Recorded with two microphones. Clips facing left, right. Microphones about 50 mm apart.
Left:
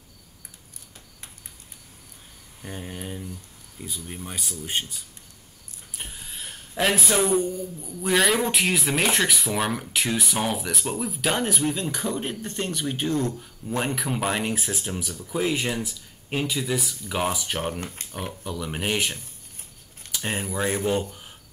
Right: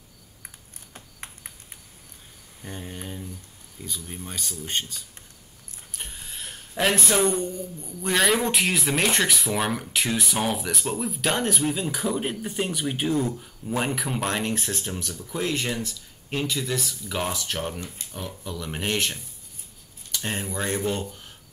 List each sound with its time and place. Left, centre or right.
0.9 s cricket: right
2.6 s a man's voice: centre
20.1 s keys jangling: centre
20.4 s speech: centre